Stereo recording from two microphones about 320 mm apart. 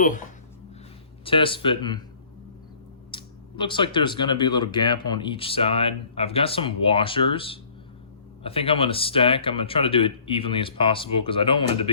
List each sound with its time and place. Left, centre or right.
1.2 s speech: centre
3.1 s speech: centre